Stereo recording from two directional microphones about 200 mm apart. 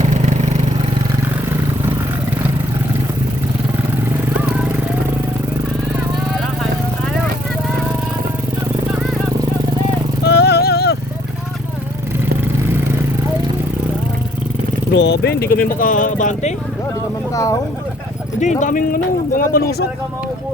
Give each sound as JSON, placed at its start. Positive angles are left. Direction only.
{"t": 4.4, "sound": "vehicle", "side_deg": -5}
{"t": 10.2, "sound": "music", "side_deg": 55}
{"t": 14.9, "sound": "speech", "side_deg": 60}
{"t": 17.3, "sound": "speech", "side_deg": 15}
{"t": 18.3, "sound": "speech", "side_deg": 40}